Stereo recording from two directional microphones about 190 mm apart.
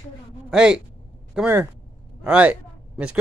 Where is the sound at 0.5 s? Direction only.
5° right (ahead or behind).